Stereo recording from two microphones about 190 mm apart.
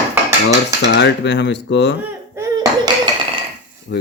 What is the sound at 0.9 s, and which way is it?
Speech, 65° left (ahead or behind).